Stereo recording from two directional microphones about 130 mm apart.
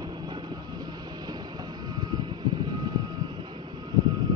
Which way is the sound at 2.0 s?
35° right (ahead or behind).